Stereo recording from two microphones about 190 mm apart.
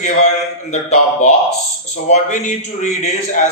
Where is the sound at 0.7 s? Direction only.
35° left (ahead or behind).